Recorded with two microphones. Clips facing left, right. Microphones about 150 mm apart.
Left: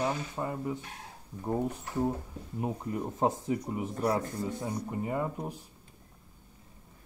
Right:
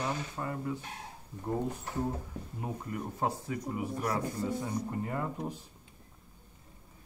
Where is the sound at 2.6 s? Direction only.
20° left (ahead or behind).